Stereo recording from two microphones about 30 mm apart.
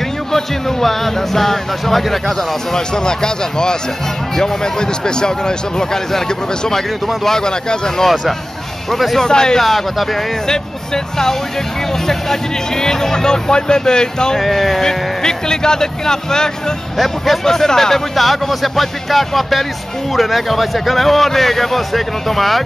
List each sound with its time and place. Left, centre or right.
0.3 s speech: centre
2.7 s speech: left
8.9 s speech: centre
9.2 s speech: left
9.6 s speech: centre
10.4 s speech: left
14.4 s a man's voice: centre
14.8 s speech: centre
16.9 s a man's voice: centre
18.1 s a man's voice: centre